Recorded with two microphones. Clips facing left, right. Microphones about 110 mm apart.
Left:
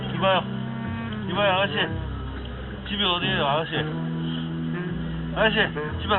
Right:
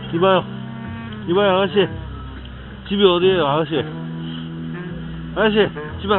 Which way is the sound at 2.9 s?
30° right (ahead or behind).